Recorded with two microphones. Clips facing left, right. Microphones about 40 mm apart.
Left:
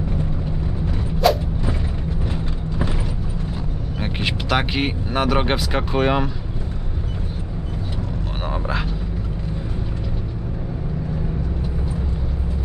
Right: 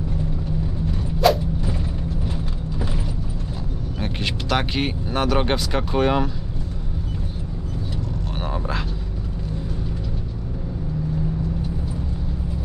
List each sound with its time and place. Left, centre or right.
1.2 s creak: centre
2.2 s mechanisms: centre
4.0 s speech: centre
8.5 s a sound: centre